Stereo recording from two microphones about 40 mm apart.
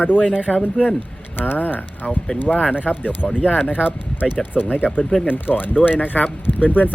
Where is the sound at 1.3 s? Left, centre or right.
Left.